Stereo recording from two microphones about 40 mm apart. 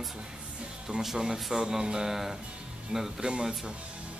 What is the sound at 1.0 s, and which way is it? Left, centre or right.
Speech, centre.